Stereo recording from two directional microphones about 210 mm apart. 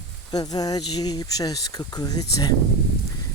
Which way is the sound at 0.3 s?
20° left (ahead or behind).